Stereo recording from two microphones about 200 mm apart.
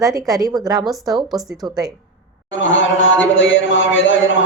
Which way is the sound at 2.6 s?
70° left (ahead or behind).